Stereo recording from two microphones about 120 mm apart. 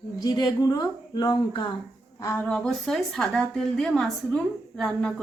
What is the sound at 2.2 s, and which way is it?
Speech, 25° left (ahead or behind).